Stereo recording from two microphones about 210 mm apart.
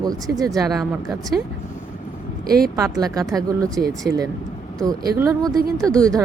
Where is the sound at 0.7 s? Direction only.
Centre (ahead or behind).